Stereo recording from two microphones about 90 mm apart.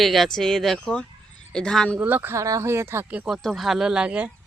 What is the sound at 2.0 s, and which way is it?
Speech, 20° right (ahead or behind).